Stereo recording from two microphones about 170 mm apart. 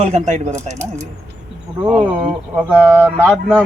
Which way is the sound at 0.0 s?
45° right (ahead or behind).